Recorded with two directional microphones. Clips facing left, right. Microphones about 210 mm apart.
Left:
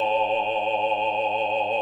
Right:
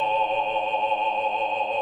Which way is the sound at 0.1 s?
30° left (ahead or behind).